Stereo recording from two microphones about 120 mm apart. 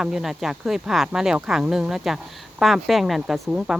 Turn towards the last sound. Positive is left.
turn(degrees=-5)  # may be behind; listen again after turning